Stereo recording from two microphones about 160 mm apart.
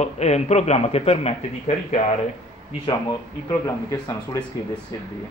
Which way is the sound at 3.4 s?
25° left (ahead or behind).